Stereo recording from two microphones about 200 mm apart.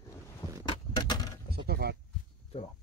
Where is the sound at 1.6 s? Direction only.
55° right (ahead or behind).